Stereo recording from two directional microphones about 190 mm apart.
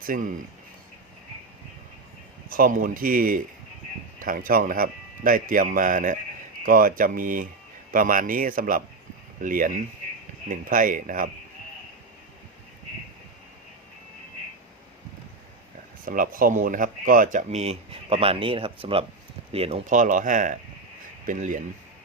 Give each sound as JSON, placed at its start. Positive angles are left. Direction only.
{"t": 0.0, "sound": "speech", "side_deg": -45}
{"t": 2.5, "sound": "a man's voice", "side_deg": -45}
{"t": 16.0, "sound": "a man's voice", "side_deg": -45}